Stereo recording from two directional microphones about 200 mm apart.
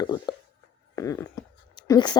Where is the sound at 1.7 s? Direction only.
20° left (ahead or behind).